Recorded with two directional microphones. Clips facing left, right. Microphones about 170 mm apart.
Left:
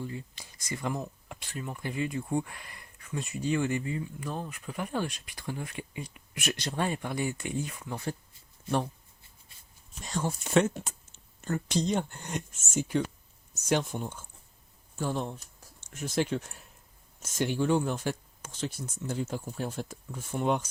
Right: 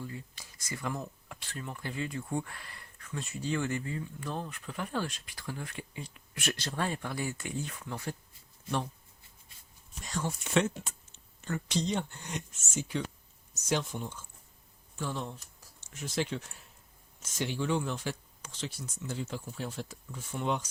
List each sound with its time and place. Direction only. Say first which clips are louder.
0.0 s speech: left 4 dB; 25° left (ahead or behind)
10.0 s speech: left 3 dB; 30° left (ahead or behind); by 20.7 s 50° left (ahead or behind)